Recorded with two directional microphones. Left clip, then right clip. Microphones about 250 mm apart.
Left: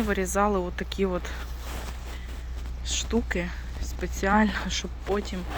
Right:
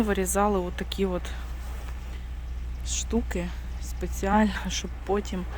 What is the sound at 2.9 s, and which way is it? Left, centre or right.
Speech, centre.